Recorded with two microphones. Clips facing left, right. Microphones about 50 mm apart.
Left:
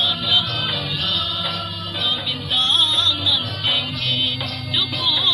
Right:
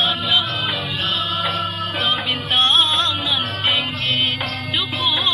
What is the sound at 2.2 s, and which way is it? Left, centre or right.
Music, right.